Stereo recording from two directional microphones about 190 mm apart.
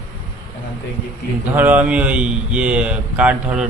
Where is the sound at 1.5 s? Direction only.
10° right (ahead or behind).